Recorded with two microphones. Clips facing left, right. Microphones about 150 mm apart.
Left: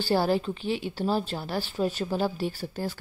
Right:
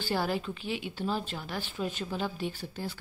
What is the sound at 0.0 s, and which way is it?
A woman's voice, 30° left (ahead or behind).